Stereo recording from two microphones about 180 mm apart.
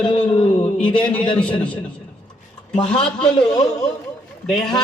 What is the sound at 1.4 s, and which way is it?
Speech, 5° left (ahead or behind).